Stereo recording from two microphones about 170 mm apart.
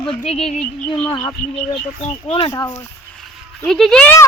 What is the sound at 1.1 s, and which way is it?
Speech, 25° left (ahead or behind).